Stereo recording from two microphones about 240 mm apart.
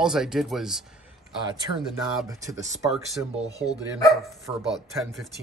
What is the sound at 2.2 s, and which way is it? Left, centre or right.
Speech, centre.